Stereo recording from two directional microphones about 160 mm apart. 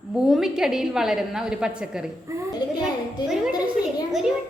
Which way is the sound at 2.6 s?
25° left (ahead or behind).